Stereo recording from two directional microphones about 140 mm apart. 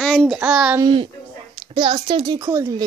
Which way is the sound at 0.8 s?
35° right (ahead or behind).